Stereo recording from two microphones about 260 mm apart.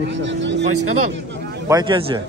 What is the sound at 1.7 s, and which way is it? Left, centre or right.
Speech, centre.